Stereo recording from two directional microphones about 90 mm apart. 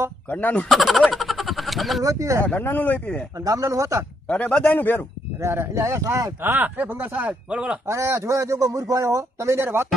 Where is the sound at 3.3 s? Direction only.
40° right (ahead or behind).